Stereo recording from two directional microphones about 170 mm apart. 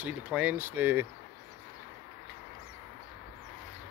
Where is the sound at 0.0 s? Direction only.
10° right (ahead or behind).